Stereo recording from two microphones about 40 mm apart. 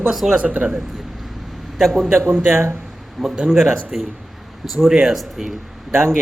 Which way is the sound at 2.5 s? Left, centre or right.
Right.